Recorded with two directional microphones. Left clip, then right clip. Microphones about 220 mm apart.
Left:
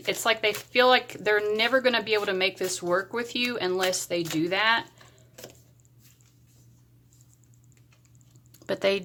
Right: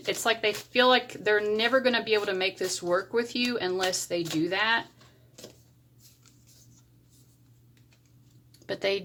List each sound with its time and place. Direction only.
0.0 s speech: 5° left (ahead or behind)
8.5 s speech: 20° left (ahead or behind)